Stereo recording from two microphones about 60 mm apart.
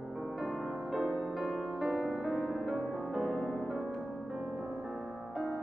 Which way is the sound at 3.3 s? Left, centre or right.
Centre.